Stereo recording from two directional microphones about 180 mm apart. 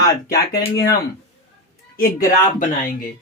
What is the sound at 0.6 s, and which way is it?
Speech, 60° left (ahead or behind).